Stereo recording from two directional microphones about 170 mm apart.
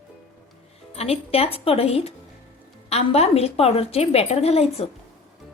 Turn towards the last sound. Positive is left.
turn(degrees=35)  # may be behind; listen again after turning